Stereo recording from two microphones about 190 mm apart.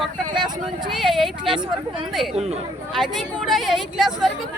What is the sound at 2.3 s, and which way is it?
Speech, 35° right (ahead or behind).